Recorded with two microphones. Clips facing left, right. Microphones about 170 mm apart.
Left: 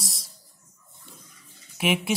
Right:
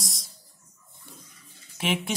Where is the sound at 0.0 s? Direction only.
Centre (ahead or behind).